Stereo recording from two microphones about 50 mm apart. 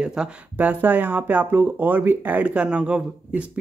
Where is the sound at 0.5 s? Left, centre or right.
Right.